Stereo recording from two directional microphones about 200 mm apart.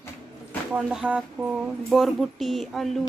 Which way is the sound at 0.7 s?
5° right (ahead or behind).